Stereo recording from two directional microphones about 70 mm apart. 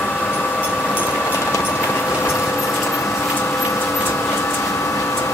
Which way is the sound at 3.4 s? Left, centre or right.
Left.